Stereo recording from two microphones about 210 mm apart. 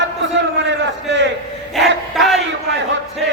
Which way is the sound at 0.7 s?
55° right (ahead or behind).